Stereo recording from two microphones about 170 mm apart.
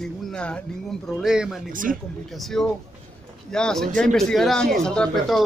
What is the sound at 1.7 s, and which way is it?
Speech, 55° right (ahead or behind).